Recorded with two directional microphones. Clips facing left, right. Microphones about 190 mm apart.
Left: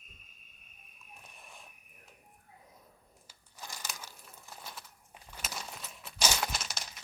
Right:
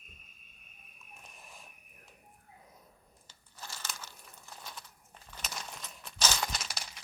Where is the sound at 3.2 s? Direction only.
10° left (ahead or behind).